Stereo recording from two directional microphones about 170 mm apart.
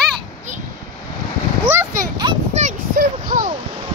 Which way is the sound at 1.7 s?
15° right (ahead or behind).